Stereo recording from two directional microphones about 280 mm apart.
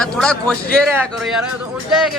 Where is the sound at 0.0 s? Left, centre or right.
Centre.